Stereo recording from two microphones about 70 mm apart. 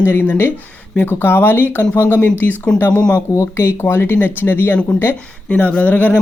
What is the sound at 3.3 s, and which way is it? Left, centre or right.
Speech, left.